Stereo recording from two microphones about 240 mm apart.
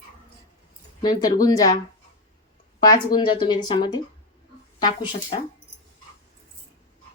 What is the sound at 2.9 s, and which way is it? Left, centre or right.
Speech, centre.